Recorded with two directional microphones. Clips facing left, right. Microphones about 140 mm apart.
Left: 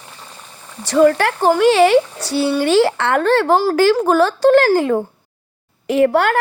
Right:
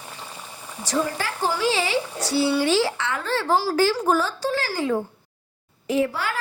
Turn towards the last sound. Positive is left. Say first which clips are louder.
# left 9 dB
turn(degrees=65)  # may be behind; listen again after turning